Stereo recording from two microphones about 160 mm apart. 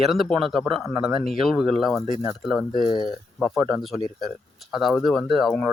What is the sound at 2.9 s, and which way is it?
Speech, 25° left (ahead or behind).